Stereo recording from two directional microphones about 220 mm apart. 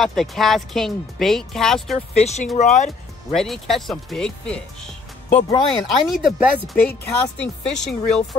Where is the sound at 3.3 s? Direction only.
Centre (ahead or behind).